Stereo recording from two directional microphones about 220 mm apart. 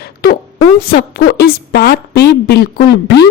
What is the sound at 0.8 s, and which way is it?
Speech, 45° left (ahead or behind).